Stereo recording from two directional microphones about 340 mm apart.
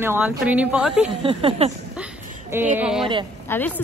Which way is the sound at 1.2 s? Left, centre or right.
Centre.